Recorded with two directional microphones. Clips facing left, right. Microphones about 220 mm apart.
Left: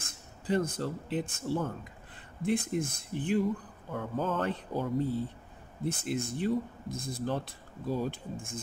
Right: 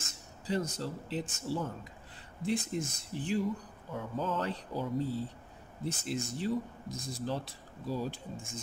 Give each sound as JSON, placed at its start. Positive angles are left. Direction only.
{"t": 0.0, "sound": "speech", "side_deg": 55}